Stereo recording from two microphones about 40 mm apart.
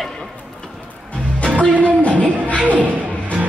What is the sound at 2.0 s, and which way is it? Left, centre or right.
Music, left.